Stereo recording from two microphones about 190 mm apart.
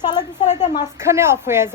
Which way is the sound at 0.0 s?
20° left (ahead or behind).